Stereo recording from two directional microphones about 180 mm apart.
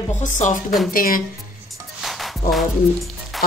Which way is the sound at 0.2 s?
45° left (ahead or behind).